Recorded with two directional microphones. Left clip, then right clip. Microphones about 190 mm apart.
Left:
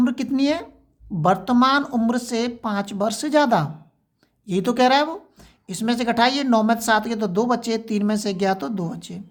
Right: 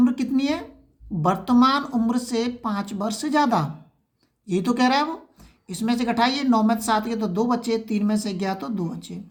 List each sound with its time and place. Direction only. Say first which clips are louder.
0.0 s speech: left 1 dB; 30° left (ahead or behind)